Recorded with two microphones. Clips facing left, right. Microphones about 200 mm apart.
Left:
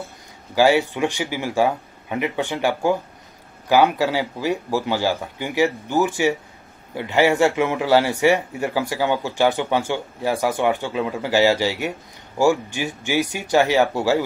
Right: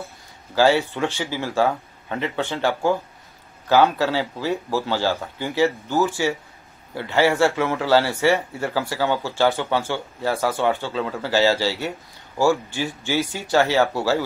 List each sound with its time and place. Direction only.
0.6 s a man's voice: 15° left (ahead or behind)